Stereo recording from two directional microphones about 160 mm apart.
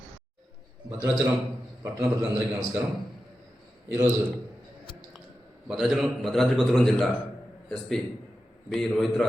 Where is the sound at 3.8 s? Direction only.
20° right (ahead or behind).